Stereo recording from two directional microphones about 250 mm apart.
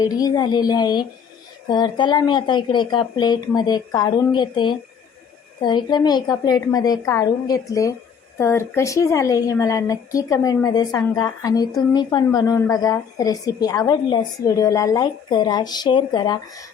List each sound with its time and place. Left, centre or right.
0.0 s a woman's voice: centre